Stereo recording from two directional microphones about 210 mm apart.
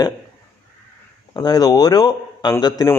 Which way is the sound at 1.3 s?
20° left (ahead or behind).